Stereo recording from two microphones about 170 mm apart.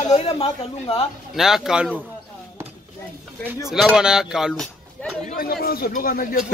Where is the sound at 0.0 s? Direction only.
40° left (ahead or behind).